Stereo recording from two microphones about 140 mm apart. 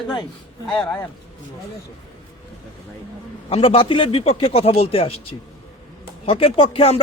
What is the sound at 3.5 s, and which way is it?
A man's voice, 40° left (ahead or behind).